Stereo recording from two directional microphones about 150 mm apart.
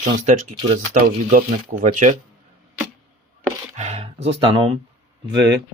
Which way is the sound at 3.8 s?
45° right (ahead or behind).